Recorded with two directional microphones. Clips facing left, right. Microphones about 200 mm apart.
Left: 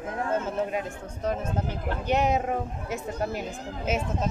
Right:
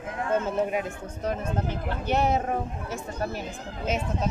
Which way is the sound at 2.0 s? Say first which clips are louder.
Even; 15° left (ahead or behind).